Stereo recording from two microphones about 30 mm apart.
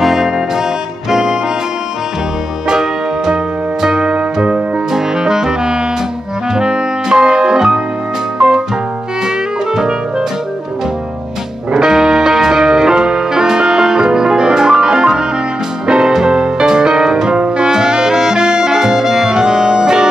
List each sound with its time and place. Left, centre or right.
0.0 s music: centre
1.1 s music: right
2.7 s music: right
9.8 s music: right
11.7 s music: right